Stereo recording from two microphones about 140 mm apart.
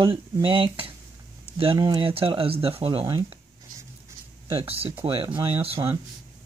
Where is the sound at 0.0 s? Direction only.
40° right (ahead or behind).